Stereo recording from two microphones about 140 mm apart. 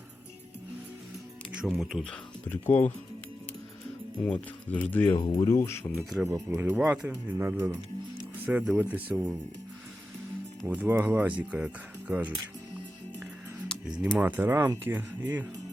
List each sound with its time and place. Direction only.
1.6 s speech: centre (ahead or behind)
2.5 s speech: 15° left (ahead or behind)
4.3 s speech: 10° left (ahead or behind)
5.1 s speech: 40° left (ahead or behind)
5.5 s speech: 20° left (ahead or behind)
6.0 s speech: centre (ahead or behind)
6.5 s speech: 20° right (ahead or behind)
10.7 s speech: 15° right (ahead or behind)
14.2 s speech: 10° right (ahead or behind)